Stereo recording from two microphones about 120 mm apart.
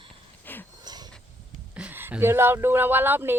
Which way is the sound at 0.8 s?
35° right (ahead or behind).